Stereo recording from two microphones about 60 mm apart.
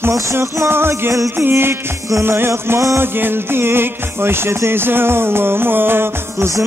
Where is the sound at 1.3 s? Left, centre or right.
Right.